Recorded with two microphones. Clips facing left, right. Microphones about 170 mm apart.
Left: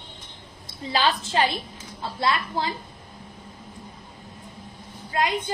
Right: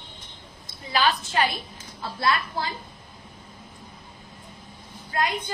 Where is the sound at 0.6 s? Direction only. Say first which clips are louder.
Even; 30° left (ahead or behind).